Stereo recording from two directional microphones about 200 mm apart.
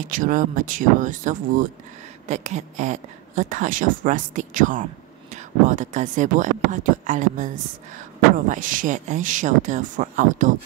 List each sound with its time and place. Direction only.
0.0 s speech: 40° right (ahead or behind)